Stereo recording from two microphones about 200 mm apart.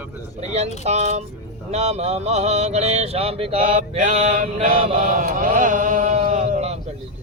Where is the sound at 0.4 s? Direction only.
30° right (ahead or behind).